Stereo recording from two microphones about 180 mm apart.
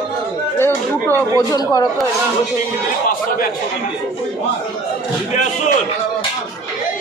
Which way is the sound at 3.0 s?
50° left (ahead or behind).